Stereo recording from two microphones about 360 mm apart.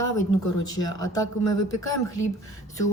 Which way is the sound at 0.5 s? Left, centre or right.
Left.